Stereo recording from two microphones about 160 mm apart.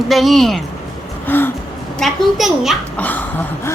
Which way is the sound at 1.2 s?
10° left (ahead or behind).